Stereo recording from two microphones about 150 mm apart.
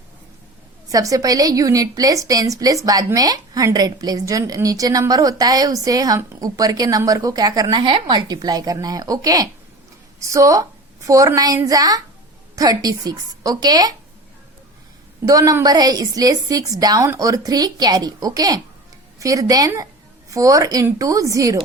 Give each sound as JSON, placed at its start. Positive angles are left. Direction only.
{"t": 0.9, "sound": "a woman's voice", "side_deg": -25}
{"t": 15.3, "sound": "a woman's voice", "side_deg": -25}